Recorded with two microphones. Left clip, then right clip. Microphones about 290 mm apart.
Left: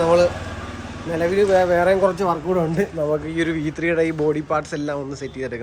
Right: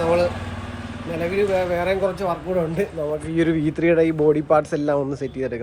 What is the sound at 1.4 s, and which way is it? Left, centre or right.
Speech, centre.